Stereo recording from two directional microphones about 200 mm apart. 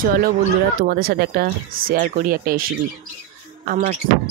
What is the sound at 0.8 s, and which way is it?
Speech, 50° right (ahead or behind).